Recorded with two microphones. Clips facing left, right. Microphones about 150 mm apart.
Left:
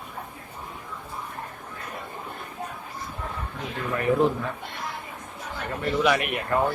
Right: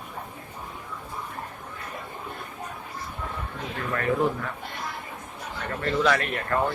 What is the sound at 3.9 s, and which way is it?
Speech, 15° left (ahead or behind).